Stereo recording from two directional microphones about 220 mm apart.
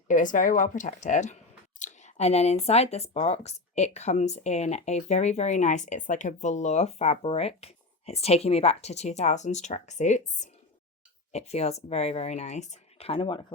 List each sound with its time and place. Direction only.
0.1 s speech: 35° left (ahead or behind)